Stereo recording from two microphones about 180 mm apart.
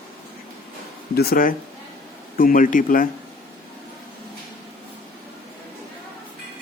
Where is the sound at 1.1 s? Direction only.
60° left (ahead or behind).